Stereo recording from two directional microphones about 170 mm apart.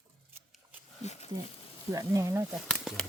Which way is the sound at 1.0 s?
40° left (ahead or behind).